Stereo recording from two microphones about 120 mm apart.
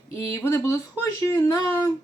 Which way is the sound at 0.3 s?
25° left (ahead or behind).